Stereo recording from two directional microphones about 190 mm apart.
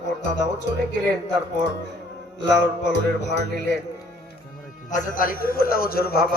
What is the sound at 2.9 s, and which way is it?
Music, 65° left (ahead or behind).